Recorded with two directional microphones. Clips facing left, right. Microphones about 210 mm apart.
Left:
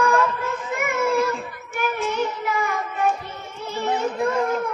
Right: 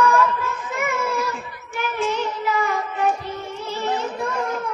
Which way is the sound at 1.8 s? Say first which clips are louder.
Even; 50° left (ahead or behind).